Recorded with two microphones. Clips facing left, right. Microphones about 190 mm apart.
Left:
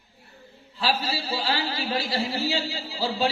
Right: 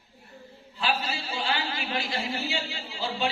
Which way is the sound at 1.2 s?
40° left (ahead or behind).